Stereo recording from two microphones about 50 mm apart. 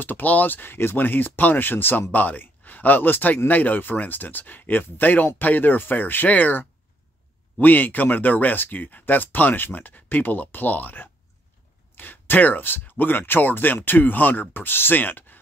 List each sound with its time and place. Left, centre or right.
0.0 s speech: left